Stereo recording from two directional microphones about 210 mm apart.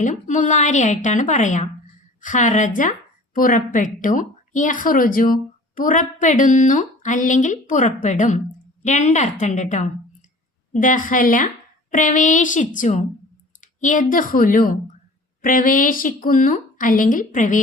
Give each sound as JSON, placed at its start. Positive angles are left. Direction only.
{"t": 0.0, "sound": "a woman's voice", "side_deg": 35}